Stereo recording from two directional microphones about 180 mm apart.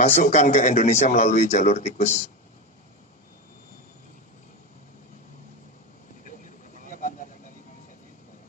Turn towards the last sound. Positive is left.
turn(degrees=45)  # may be behind; listen again after turning